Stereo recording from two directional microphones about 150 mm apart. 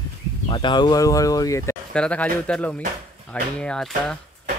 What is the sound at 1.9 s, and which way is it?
Speech, 10° left (ahead or behind).